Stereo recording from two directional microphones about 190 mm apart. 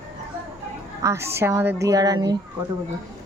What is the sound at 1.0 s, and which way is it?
A woman's voice, 15° right (ahead or behind).